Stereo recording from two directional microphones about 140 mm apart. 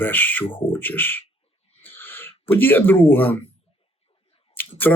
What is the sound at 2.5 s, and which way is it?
Speech, 15° left (ahead or behind).